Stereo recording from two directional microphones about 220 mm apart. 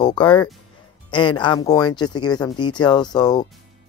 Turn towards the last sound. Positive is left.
turn(degrees=20)  # may be behind; listen again after turning